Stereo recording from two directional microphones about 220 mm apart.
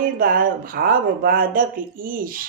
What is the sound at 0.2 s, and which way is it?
Speech, 40° right (ahead or behind).